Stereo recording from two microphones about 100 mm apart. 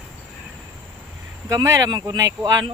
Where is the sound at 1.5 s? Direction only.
30° right (ahead or behind).